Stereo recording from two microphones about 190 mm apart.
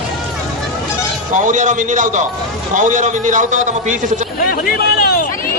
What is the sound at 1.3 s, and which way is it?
A man's voice, 40° right (ahead or behind).